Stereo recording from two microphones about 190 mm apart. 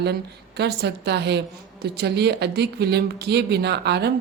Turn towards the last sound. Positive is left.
turn(degrees=-60)  # may be behind; listen again after turning